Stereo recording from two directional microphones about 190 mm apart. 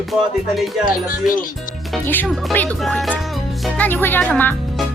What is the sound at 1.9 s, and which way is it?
Music, 5° left (ahead or behind).